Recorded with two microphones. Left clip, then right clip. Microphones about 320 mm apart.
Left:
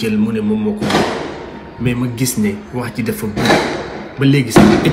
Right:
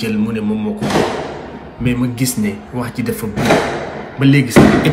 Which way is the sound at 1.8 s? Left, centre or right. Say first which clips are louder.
Right 1 dB; centre.